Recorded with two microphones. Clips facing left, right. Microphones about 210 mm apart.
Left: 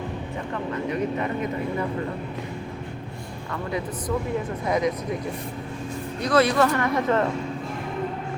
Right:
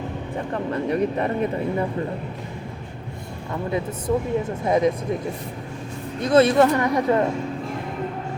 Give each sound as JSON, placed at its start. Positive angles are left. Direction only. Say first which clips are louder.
{"t": 0.5, "sound": "a sound", "louder": "right 4 dB", "side_deg": -35}
{"t": 4.6, "sound": "speech", "louder": "right 4 dB", "side_deg": -25}
{"t": 6.2, "sound": "speech", "louder": "right 4 dB", "side_deg": -25}